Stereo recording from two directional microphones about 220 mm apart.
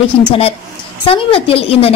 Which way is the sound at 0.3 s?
25° left (ahead or behind).